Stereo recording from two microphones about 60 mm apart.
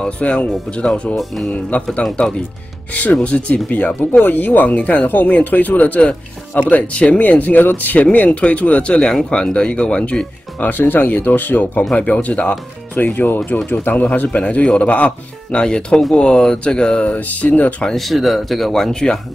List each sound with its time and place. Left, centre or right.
0.0 s speech: centre
1.1 s speech: centre
1.7 s speech: left
3.2 s speech: centre
4.2 s speech: left; by 10.2 s centre
10.6 s speech: left
11.9 s speech: left
17.1 s speech: left
17.8 s speech: centre